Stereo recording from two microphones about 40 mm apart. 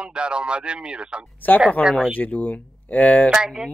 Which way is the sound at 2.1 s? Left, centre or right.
Left.